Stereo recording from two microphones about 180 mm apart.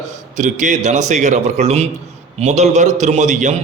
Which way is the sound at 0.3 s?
45° right (ahead or behind).